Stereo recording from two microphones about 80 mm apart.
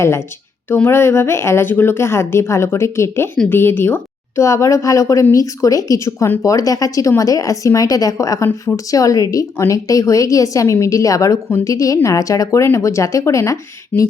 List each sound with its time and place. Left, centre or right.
0.7 s a woman's voice: left